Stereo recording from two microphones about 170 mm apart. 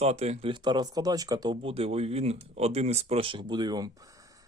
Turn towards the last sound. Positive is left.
turn(degrees=-20)  # may be behind; listen again after turning